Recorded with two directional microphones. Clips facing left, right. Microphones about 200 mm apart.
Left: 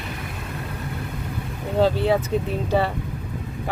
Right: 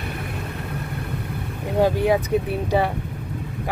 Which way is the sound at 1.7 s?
15° right (ahead or behind).